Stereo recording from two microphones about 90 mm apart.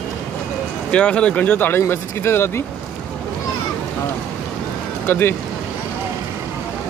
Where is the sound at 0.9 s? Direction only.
15° left (ahead or behind).